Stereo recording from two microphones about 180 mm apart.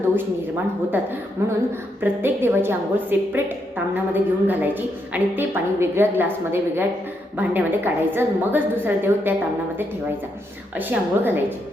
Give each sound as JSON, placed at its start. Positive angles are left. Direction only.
{"t": 0.2, "sound": "a woman's voice", "side_deg": -10}
{"t": 10.8, "sound": "a woman's voice", "side_deg": -10}